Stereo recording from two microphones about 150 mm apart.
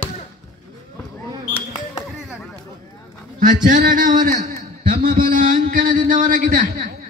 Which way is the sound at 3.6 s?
60° right (ahead or behind).